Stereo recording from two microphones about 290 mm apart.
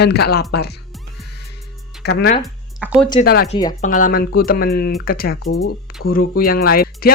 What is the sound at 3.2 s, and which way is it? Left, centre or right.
Speech, left.